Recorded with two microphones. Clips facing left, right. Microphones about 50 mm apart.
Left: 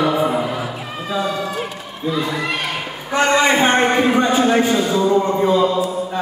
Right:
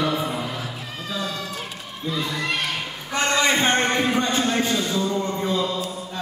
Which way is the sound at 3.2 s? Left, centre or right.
Centre.